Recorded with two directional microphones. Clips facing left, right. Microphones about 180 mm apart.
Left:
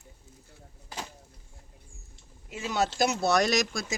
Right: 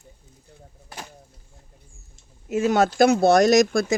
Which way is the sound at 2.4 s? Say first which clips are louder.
Right 10 dB; 50° right (ahead or behind).